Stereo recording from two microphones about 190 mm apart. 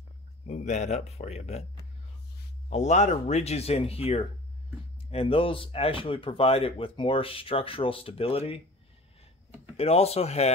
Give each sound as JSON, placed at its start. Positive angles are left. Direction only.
{"t": 0.5, "sound": "speech", "side_deg": 35}
{"t": 2.7, "sound": "speech", "side_deg": 35}
{"t": 9.8, "sound": "speech", "side_deg": 30}